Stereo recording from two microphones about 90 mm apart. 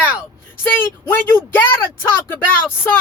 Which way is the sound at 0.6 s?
20° left (ahead or behind).